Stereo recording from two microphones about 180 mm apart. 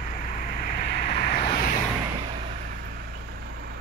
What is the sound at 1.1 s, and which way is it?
Vehicle, 35° left (ahead or behind).